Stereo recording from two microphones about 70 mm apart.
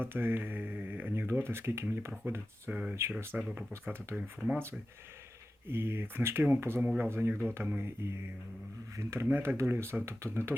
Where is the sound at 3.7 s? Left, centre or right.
Right.